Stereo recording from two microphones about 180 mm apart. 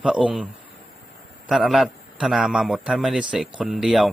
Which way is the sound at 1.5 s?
Centre (ahead or behind).